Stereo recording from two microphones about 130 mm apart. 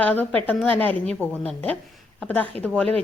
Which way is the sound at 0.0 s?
10° left (ahead or behind).